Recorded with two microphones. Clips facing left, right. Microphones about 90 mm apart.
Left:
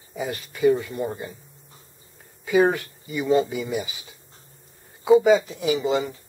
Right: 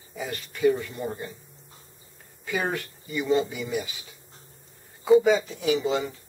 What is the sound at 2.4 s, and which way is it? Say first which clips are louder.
Speech: left 9 dB; 10° left (ahead or behind).